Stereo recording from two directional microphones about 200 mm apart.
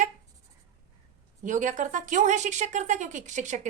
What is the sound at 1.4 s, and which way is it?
A woman's voice, 40° right (ahead or behind).